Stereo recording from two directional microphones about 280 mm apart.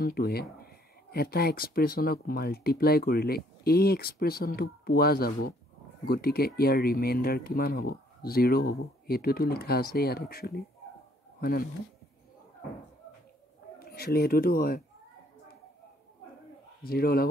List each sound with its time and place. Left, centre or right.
0.0 s speech: left
13.7 s speech: left
16.8 s speech: left